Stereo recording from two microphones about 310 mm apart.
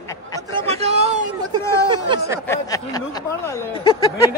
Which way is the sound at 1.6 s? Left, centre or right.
Centre.